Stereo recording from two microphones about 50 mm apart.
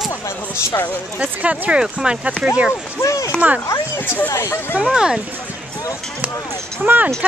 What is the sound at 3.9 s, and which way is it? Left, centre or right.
Speech, left.